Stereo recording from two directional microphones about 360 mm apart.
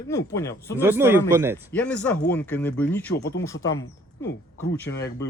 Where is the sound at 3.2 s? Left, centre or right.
Left.